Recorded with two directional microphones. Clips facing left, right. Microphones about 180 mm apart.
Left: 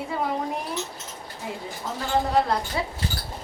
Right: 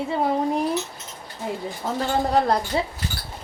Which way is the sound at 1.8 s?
50° right (ahead or behind).